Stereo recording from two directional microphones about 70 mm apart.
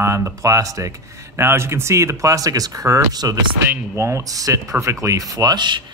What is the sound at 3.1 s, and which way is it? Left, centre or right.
Speech, right.